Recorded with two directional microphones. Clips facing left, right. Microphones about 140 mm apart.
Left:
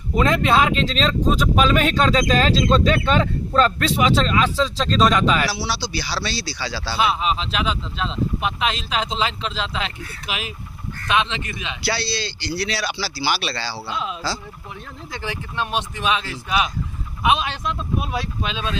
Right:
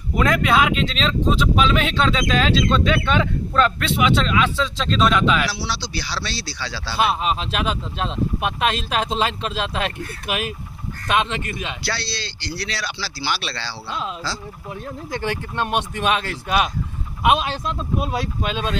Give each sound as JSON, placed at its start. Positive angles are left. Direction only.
{"t": 0.2, "sound": "speech", "side_deg": 25}
{"t": 5.5, "sound": "speech", "side_deg": 5}
{"t": 7.0, "sound": "speech", "side_deg": -45}
{"t": 11.9, "sound": "speech", "side_deg": 5}
{"t": 15.1, "sound": "speech", "side_deg": -55}
{"t": 17.2, "sound": "speech", "side_deg": -45}